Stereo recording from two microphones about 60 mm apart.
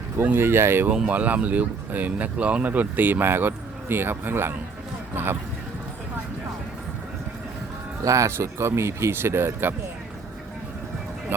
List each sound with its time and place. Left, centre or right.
0.3 s speech: right
0.9 s speech: centre; by 5.4 s right
8.0 s speech: right
8.4 s speech: right